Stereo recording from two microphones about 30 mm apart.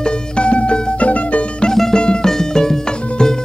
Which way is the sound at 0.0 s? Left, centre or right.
Left.